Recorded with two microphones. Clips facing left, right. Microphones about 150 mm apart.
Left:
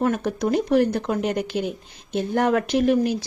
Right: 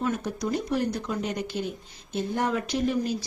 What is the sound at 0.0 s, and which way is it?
Speech, 60° left (ahead or behind).